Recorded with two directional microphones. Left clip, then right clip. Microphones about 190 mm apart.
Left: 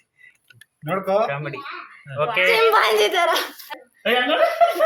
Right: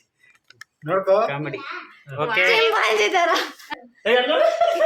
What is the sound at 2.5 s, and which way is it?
Speech, 20° left (ahead or behind).